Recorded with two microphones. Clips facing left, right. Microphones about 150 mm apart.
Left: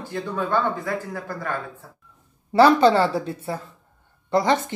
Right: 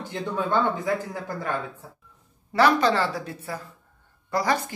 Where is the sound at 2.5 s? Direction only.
30° left (ahead or behind).